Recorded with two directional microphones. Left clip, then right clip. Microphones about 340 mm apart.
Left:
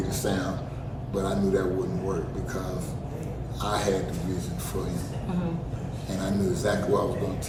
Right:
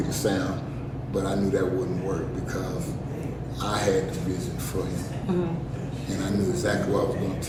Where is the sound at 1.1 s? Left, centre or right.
Centre.